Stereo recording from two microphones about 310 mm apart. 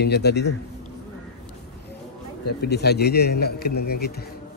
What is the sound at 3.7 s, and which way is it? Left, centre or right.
Speech, left.